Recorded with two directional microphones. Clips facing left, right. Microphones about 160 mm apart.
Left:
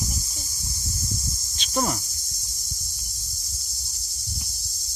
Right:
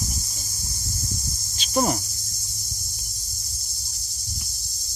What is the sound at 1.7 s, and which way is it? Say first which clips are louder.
Cricket: right 3 dB; 20° right (ahead or behind).